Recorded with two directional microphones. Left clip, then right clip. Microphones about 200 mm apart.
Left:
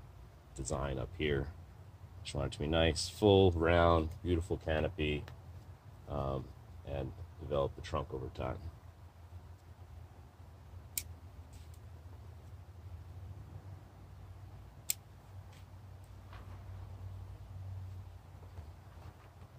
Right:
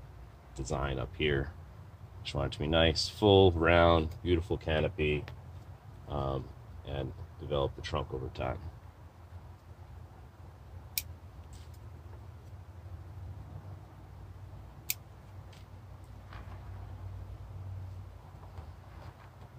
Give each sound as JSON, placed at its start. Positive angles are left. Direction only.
{"t": 0.6, "sound": "speech", "side_deg": 30}